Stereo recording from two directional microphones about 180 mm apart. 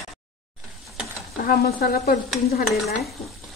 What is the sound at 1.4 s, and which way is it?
Speech, 55° left (ahead or behind).